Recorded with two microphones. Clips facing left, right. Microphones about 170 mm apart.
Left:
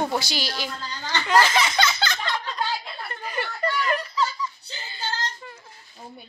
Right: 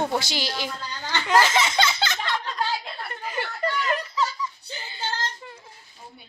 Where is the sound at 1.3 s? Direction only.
20° right (ahead or behind).